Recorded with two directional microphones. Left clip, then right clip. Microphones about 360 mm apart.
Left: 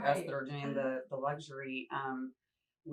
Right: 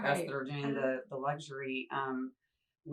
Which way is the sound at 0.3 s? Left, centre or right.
Centre.